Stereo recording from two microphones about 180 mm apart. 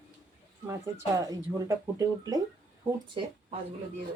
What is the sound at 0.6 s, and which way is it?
Speech, 15° right (ahead or behind).